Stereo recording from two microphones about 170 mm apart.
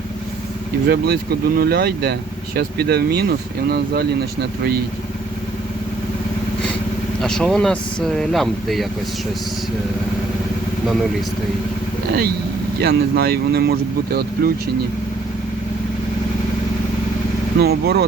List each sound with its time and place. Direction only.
0.9 s speech: 70° right (ahead or behind)
7.2 s speech: 5° left (ahead or behind)
12.8 s speech: 70° right (ahead or behind)
17.6 s speech: 70° right (ahead or behind)